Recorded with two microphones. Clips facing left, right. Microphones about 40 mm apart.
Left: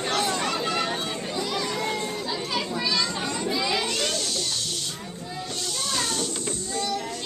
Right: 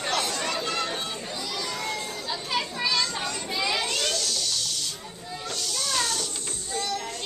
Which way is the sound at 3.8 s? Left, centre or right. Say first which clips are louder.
Left 1 dB; centre.